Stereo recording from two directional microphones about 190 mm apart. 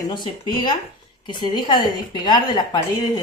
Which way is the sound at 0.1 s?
25° left (ahead or behind).